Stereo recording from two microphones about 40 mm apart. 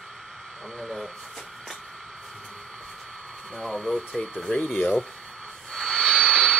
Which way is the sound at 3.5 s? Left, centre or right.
Left.